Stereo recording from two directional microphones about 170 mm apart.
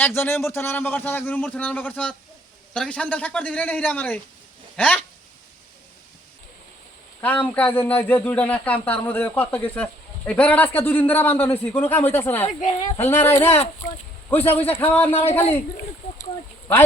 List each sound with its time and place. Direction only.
0.0 s speech: 15° left (ahead or behind)
7.2 s speech: 10° left (ahead or behind)
12.5 s a woman's voice: 45° left (ahead or behind)
13.1 s speech: 15° left (ahead or behind)
15.1 s a man's voice: 35° left (ahead or behind)